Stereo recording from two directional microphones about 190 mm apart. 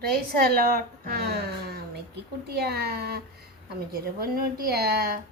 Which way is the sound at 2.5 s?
55° right (ahead or behind).